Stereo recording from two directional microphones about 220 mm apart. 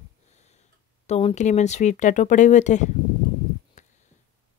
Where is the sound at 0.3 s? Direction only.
30° left (ahead or behind).